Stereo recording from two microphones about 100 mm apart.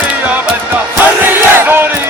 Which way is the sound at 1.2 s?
20° right (ahead or behind).